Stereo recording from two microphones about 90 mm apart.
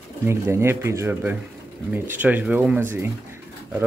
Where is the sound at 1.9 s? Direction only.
20° right (ahead or behind).